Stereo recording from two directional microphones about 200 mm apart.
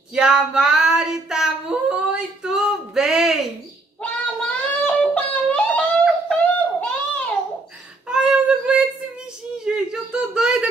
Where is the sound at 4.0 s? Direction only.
5° left (ahead or behind).